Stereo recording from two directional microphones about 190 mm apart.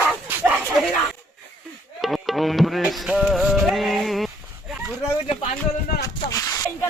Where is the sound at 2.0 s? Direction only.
Centre (ahead or behind).